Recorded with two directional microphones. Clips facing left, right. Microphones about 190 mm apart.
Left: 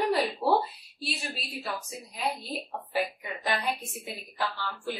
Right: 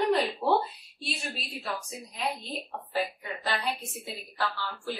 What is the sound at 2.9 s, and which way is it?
Speech, 10° left (ahead or behind).